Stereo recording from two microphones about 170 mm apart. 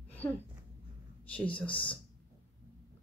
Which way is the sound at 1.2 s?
10° left (ahead or behind).